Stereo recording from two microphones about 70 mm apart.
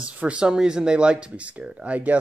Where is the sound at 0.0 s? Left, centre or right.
Centre.